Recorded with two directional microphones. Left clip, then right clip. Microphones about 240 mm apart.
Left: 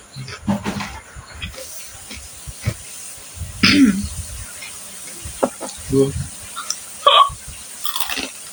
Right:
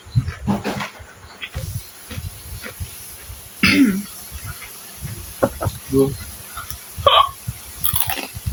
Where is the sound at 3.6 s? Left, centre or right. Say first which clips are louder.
Left 1 dB; centre.